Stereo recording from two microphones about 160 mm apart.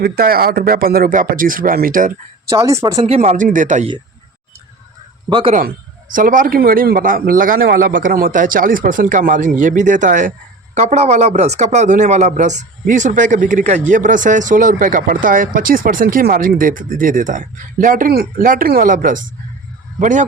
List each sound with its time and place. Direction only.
0.0 s speech: 70° right (ahead or behind)
2.5 s speech: 20° right (ahead or behind)
3.1 s speech: 40° right (ahead or behind)
5.3 s speech: 30° right (ahead or behind)
6.1 s speech: 55° right (ahead or behind)